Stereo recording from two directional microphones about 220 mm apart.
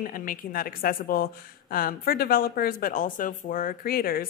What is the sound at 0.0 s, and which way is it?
A woman's voice, 40° left (ahead or behind).